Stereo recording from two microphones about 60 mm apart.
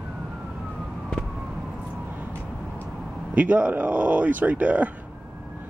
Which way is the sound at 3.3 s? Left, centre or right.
Right.